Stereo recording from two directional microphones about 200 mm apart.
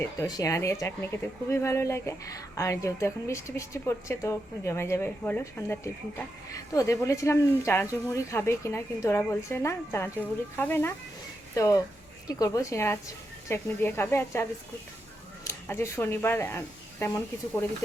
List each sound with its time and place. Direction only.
0.0 s speech: 15° left (ahead or behind)
15.4 s speech: 15° left (ahead or behind)